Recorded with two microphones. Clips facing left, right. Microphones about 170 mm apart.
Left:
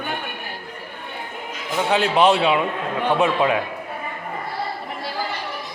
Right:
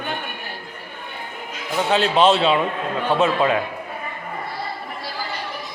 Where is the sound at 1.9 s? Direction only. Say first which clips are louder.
Even; 15° left (ahead or behind).